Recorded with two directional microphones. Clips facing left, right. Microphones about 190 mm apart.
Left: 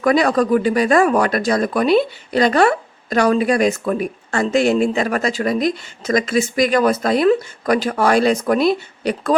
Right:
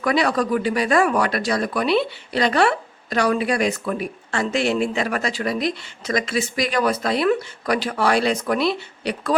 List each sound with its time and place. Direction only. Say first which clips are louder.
0.0 s speech: left 5 dB; 45° left (ahead or behind)